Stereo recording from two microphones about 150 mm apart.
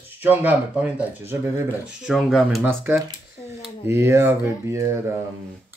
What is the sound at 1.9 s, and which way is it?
Speech, 5° right (ahead or behind).